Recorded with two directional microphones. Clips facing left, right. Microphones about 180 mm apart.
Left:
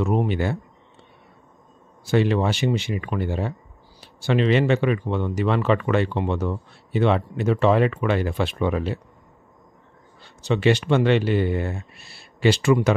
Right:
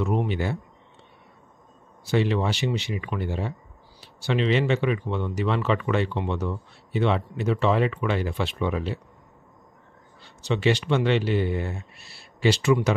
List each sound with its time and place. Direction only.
0.0 s speech: 45° left (ahead or behind)
2.0 s speech: 50° left (ahead or behind)
10.4 s speech: 50° left (ahead or behind)